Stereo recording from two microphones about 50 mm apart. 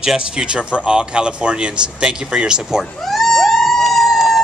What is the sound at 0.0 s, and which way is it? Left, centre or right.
Speech, centre.